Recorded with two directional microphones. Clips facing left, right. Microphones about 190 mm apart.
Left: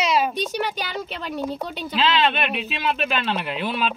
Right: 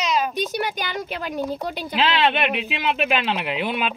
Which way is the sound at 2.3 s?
15° right (ahead or behind).